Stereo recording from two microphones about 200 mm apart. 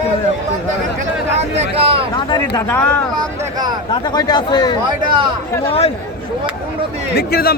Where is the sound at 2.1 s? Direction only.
20° left (ahead or behind).